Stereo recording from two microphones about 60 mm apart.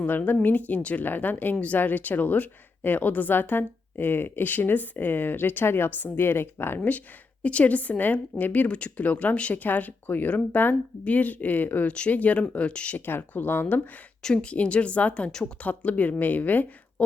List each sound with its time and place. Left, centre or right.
0.0 s a woman's voice: left
13.1 s speech: left
14.2 s a woman's voice: centre
15.3 s speech: centre
15.5 s a woman's voice: left